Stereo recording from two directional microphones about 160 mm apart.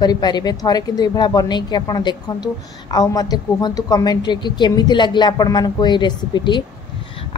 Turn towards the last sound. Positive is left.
turn(degrees=30)  # may be behind; listen again after turning